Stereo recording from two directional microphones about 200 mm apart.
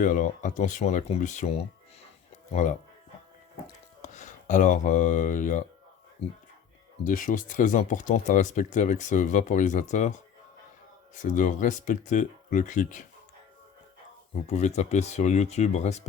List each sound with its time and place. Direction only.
0.0 s speech: 40° left (ahead or behind)
4.0 s speech: 35° left (ahead or behind)
7.0 s speech: 40° left (ahead or behind)
14.4 s speech: 35° left (ahead or behind)